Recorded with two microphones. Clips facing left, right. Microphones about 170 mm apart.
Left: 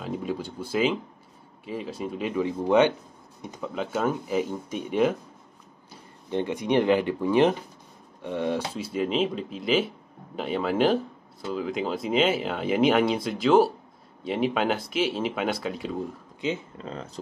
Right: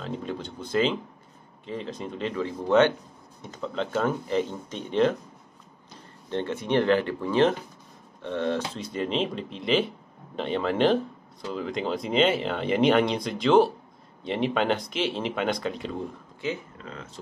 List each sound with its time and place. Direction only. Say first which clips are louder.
0.0 s speech: left 2 dB; 10° left (ahead or behind)
6.3 s speech: left 1 dB; 15° left (ahead or behind)
16.7 s speech: left 4 dB; 30° left (ahead or behind)